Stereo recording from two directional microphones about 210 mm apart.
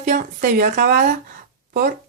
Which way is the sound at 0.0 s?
35° right (ahead or behind).